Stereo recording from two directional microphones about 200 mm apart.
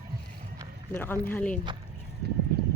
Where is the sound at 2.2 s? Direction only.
55° right (ahead or behind).